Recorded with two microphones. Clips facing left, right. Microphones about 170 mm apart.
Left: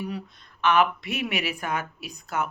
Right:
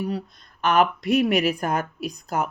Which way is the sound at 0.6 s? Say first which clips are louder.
Right 2 dB; 40° right (ahead or behind).